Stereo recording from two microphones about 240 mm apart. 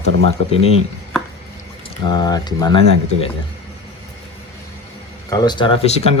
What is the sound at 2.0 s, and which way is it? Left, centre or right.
Speech, centre.